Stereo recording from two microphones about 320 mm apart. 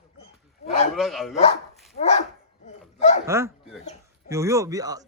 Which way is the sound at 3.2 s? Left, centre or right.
Centre.